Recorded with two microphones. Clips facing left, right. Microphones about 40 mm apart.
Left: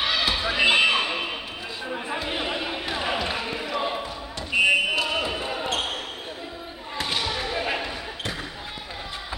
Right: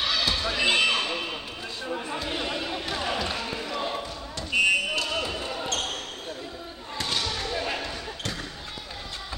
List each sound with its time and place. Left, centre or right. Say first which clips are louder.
0.0 s basketball bounce: left 2 dB; centre
7.0 s basketball bounce: left 2 dB; centre